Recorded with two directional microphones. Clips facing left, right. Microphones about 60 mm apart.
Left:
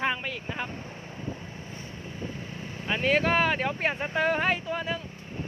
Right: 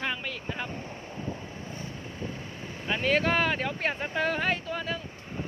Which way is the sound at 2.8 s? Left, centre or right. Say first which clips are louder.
Left 1 dB; centre.